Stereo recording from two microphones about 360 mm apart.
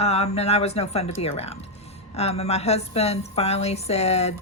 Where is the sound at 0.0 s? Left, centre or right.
Centre.